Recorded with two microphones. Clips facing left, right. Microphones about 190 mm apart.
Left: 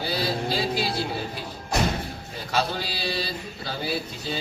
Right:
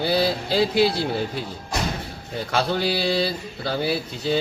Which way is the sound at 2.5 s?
60° right (ahead or behind).